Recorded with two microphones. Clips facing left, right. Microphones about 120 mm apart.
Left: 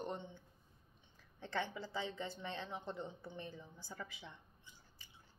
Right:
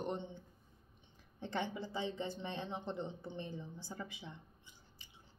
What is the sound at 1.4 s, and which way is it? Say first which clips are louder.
Speech: right 2 dB; 15° right (ahead or behind).